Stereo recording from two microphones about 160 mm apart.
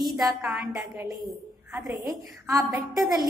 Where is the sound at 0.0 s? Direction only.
Centre (ahead or behind).